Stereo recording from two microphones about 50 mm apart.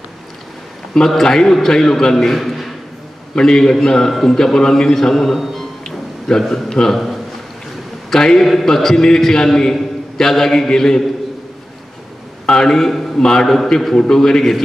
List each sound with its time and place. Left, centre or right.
0.9 s a man's voice: centre
3.3 s a man's voice: centre
5.4 s music: centre
5.9 s a sound: centre
6.4 s a man's voice: centre
12.4 s a man's voice: centre